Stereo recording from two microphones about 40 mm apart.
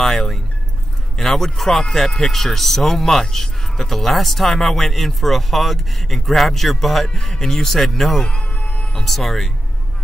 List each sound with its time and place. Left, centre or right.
0.0 s a man's voice: centre
8.2 s music: left
8.9 s a man's voice: centre